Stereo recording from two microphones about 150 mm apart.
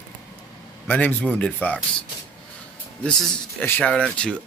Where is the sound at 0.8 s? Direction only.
10° left (ahead or behind).